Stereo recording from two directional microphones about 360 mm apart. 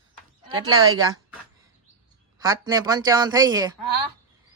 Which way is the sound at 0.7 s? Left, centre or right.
Right.